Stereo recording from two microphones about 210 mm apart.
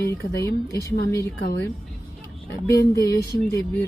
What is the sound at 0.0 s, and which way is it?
Speech, 15° left (ahead or behind).